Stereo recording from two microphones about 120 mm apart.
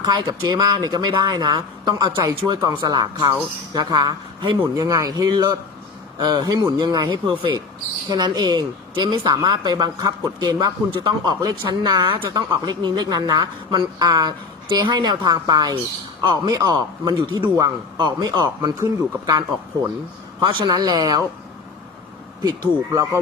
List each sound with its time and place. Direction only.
0.0 s speech: 35° right (ahead or behind)
4.6 s speech: 25° right (ahead or behind)
22.9 s speech: 25° right (ahead or behind)